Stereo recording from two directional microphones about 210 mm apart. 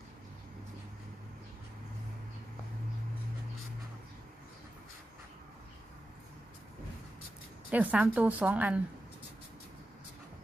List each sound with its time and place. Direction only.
7.7 s a woman's voice: 5° right (ahead or behind)